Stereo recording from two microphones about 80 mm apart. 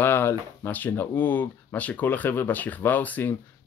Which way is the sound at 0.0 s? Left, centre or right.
Left.